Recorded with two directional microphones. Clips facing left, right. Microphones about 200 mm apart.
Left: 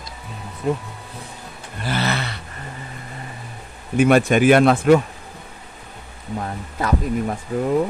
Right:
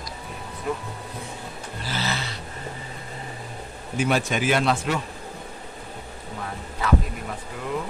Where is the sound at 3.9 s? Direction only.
55° left (ahead or behind).